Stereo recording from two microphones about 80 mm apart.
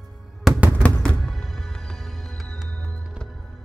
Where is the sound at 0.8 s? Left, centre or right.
Centre.